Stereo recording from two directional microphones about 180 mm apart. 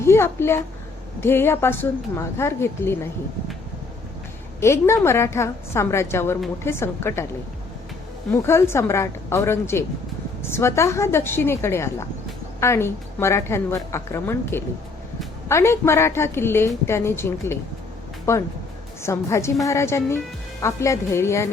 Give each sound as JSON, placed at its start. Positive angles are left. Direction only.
{"t": 0.0, "sound": "a woman's voice", "side_deg": 15}
{"t": 4.6, "sound": "a woman's voice", "side_deg": 15}
{"t": 8.3, "sound": "a woman's voice", "side_deg": 15}